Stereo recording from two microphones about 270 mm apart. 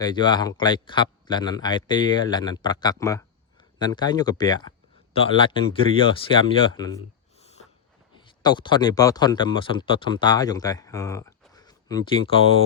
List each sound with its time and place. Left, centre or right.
0.0 s speech: centre